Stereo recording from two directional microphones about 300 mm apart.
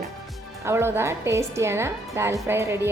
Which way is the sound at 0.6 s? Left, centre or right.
Centre.